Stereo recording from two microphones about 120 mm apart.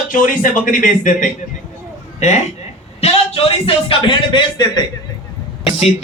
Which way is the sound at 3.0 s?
55° left (ahead or behind).